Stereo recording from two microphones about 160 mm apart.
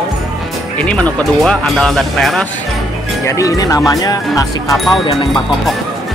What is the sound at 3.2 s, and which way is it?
Speech, 20° left (ahead or behind).